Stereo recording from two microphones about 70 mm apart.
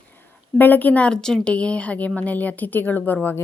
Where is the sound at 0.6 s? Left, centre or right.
Left.